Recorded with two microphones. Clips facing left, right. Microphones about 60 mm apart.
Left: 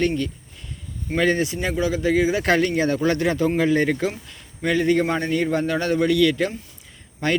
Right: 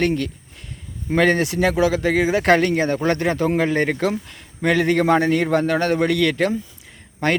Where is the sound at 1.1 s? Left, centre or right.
Right.